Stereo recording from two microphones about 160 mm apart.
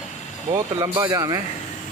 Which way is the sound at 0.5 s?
25° right (ahead or behind).